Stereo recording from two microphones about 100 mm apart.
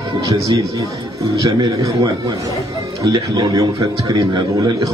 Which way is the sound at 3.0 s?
40° right (ahead or behind).